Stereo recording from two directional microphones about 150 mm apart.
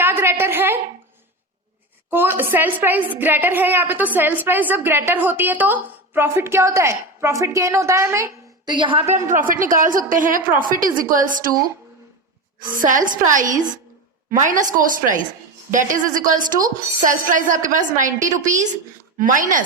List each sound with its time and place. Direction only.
0.0 s a sound: 15° right (ahead or behind)
2.0 s a woman's voice: 15° right (ahead or behind)
8.7 s a woman's voice: 35° right (ahead or behind)
9.0 s a woman's voice: 55° right (ahead or behind)
12.6 s a woman's voice: 65° right (ahead or behind)